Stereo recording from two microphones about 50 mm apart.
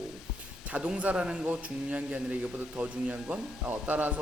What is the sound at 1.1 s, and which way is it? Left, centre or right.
A man's voice, centre.